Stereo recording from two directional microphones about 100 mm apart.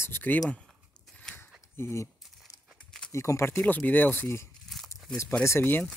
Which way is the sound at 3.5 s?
15° left (ahead or behind).